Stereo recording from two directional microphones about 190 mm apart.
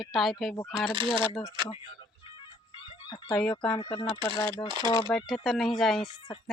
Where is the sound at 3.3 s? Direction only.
5° left (ahead or behind).